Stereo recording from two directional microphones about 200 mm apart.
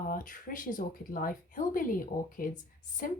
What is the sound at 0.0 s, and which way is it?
Speech, 45° left (ahead or behind).